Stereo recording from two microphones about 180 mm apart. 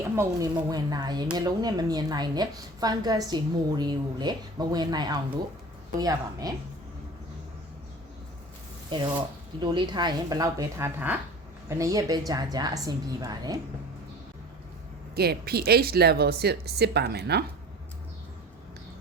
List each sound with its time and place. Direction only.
0.2 s speech: 20° right (ahead or behind)
8.9 s speech: 25° right (ahead or behind)
15.1 s speech: 60° right (ahead or behind)